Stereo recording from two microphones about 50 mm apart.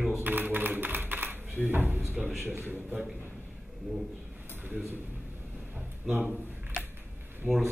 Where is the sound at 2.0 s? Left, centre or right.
Centre.